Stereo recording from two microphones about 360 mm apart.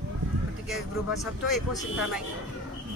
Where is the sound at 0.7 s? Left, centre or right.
Centre.